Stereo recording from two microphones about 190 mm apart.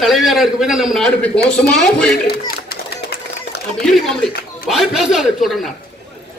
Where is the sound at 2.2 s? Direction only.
55° left (ahead or behind).